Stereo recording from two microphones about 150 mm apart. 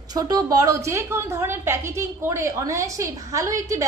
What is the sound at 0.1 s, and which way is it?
A woman's voice, 25° right (ahead or behind).